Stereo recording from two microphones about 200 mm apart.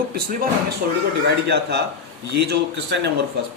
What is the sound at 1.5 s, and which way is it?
Speech, 55° right (ahead or behind).